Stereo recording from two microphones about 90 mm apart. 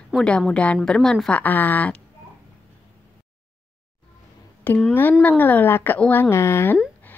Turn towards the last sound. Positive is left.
turn(degrees=30)  # may be behind; listen again after turning